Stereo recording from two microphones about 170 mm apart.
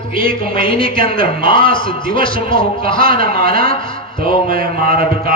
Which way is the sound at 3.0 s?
55° right (ahead or behind).